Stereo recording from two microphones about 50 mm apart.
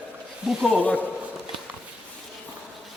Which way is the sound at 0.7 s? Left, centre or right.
Left.